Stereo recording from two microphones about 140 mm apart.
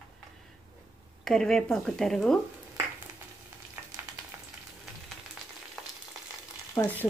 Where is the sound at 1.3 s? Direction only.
5° left (ahead or behind).